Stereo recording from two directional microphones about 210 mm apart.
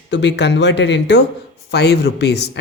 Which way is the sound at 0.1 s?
55° left (ahead or behind).